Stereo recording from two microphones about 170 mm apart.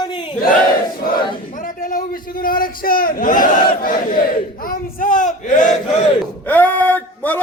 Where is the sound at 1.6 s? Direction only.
55° left (ahead or behind).